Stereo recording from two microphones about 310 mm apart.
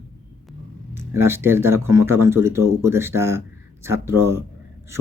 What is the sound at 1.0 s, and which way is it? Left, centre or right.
Speech, centre.